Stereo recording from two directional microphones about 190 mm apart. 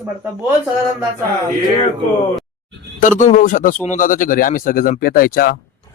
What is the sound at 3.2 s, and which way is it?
Speech, 40° left (ahead or behind).